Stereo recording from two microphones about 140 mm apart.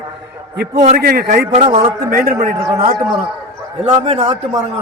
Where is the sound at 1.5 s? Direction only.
45° right (ahead or behind).